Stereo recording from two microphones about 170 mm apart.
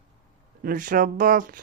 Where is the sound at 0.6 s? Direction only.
55° right (ahead or behind).